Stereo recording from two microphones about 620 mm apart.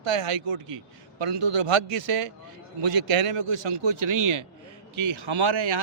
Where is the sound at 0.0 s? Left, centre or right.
Right.